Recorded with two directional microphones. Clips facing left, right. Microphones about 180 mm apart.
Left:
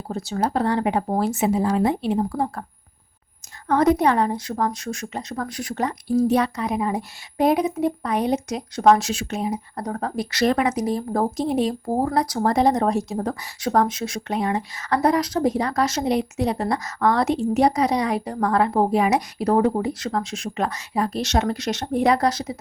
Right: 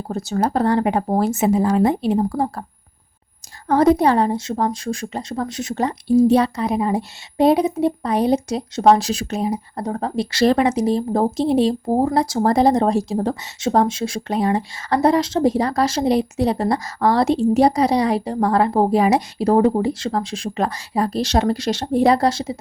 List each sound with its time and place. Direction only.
0.1 s speech: 45° right (ahead or behind)
3.7 s a woman's voice: 30° right (ahead or behind)